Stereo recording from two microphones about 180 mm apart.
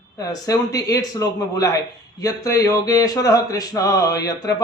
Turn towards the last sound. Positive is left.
turn(degrees=20)  # may be behind; listen again after turning